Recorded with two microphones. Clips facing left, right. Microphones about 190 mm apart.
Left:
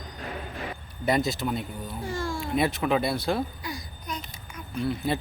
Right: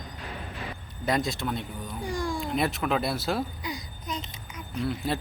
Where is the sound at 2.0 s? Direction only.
15° right (ahead or behind).